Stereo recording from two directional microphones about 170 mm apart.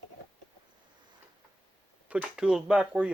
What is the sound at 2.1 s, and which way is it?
Speech, 5° right (ahead or behind).